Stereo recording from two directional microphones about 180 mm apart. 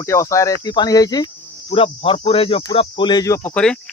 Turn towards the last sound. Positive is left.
turn(degrees=15)  # may be behind; listen again after turning